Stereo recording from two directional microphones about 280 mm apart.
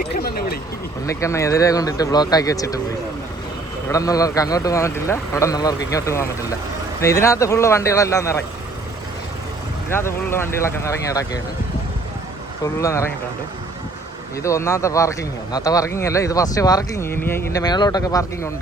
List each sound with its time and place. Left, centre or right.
0.1 s a sound: left
1.0 s speech: centre
3.8 s speech: centre
9.9 s speech: centre
12.8 s speech: centre
14.4 s speech: centre